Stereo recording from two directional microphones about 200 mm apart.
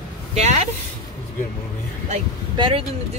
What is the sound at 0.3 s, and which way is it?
Speech, 35° right (ahead or behind).